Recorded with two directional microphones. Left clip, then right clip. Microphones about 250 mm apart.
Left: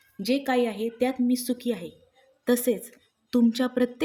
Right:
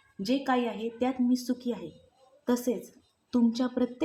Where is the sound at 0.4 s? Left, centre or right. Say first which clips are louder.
Left 4 dB; left.